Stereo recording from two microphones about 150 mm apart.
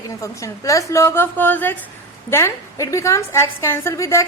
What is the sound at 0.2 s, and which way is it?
A woman's voice, 20° left (ahead or behind).